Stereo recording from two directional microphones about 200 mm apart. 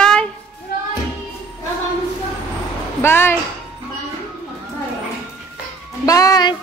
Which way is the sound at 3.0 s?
10° left (ahead or behind).